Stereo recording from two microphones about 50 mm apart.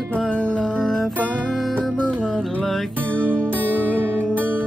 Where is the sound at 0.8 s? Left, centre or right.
Centre.